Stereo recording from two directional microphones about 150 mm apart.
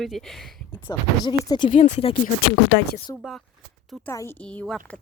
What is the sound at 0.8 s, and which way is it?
Speech, 30° left (ahead or behind).